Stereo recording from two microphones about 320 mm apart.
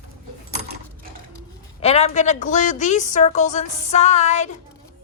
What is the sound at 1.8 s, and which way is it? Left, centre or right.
A woman's voice, centre.